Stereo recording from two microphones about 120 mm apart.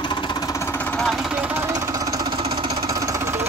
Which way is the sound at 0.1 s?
35° left (ahead or behind).